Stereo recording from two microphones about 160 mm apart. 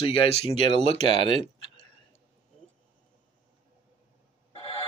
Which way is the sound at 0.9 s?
40° right (ahead or behind).